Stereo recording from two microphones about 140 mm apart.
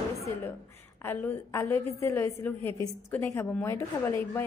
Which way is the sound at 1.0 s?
15° left (ahead or behind).